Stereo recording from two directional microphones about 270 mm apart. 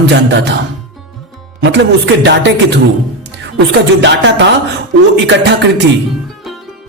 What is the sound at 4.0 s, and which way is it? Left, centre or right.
Speech, right.